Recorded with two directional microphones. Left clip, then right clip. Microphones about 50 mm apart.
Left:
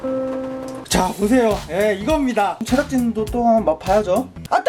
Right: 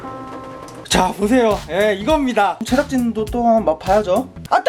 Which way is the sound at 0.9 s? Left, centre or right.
Centre.